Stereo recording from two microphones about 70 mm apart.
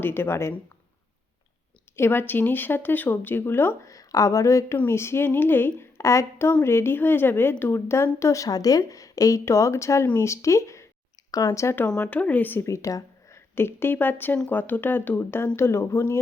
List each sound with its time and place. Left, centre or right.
0.0 s a woman's voice: left
2.0 s speech: left
3.8 s speech: left
4.9 s a woman's voice: left
5.8 s a woman's voice: left
8.4 s a woman's voice: left
11.3 s speech: left
11.9 s speech: centre
12.6 s a sound: left
13.6 s speech: left
14.3 s speech: centre
14.6 s a woman's voice: left